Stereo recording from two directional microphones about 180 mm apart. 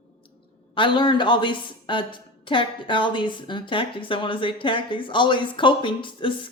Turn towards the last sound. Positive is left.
turn(degrees=25)  # may be behind; listen again after turning